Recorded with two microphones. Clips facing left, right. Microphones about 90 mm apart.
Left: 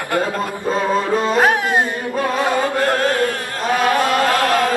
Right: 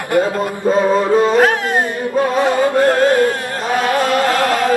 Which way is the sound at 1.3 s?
15° left (ahead or behind).